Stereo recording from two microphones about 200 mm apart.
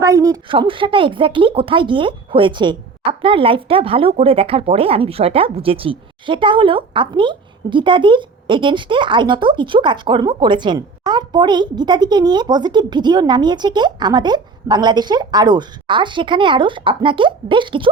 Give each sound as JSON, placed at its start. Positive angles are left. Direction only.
{"t": 0.0, "sound": "speech", "side_deg": -15}